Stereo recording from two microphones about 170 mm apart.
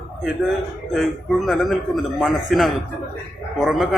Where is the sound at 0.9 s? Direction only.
Centre (ahead or behind).